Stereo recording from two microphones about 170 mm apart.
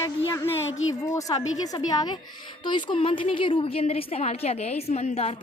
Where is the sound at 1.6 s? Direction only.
25° left (ahead or behind).